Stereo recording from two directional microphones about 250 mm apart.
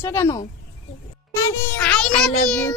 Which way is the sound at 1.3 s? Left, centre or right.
Centre.